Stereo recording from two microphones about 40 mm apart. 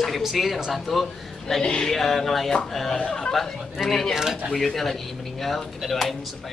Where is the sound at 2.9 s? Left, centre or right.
Centre.